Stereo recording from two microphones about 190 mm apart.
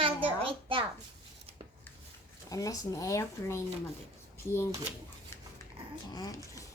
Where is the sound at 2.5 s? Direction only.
20° left (ahead or behind).